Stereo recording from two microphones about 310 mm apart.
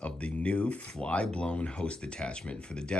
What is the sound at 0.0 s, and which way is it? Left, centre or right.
Speech, centre.